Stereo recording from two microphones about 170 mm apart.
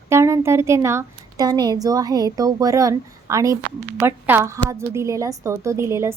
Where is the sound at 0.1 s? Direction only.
15° right (ahead or behind).